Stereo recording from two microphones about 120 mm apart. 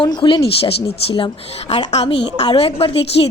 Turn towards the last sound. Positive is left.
turn(degrees=50)  # may be behind; listen again after turning